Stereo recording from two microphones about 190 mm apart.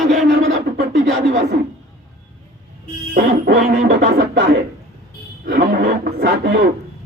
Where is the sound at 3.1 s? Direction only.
55° right (ahead or behind).